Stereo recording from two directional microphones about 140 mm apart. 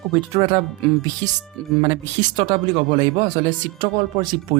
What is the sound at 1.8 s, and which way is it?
Speech, 40° right (ahead or behind).